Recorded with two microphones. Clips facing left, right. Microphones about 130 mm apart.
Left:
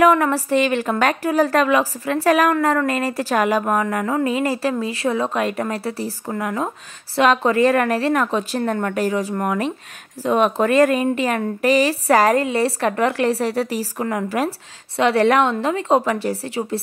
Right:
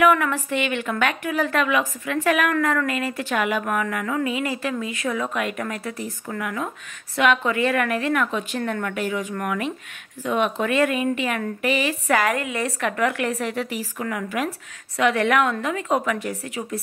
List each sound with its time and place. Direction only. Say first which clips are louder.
0.0 s speech: left 4 dB; 35° left (ahead or behind)